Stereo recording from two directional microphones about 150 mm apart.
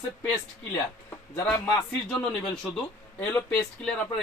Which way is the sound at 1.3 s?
15° left (ahead or behind).